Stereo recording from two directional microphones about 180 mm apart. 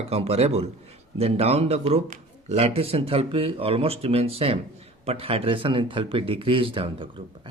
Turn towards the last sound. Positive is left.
turn(degrees=-30)  # may be behind; listen again after turning